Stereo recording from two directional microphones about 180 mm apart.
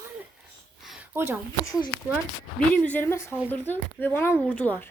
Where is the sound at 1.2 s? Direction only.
15° right (ahead or behind).